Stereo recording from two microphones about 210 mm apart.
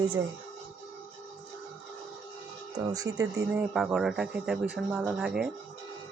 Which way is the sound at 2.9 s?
15° right (ahead or behind).